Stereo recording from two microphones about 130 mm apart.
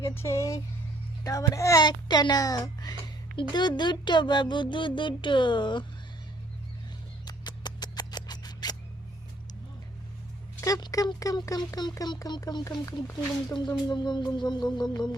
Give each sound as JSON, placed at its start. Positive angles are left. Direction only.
{"t": 0.0, "sound": "speech", "side_deg": 20}
{"t": 7.3, "sound": "mouse", "side_deg": 30}
{"t": 10.6, "sound": "speech", "side_deg": 25}